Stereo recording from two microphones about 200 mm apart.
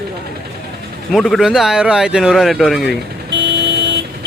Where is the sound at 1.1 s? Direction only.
Centre (ahead or behind).